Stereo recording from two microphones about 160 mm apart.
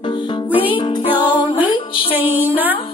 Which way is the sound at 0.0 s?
30° left (ahead or behind).